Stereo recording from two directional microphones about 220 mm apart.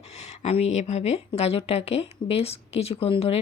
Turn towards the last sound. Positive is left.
turn(degrees=25)  # may be behind; listen again after turning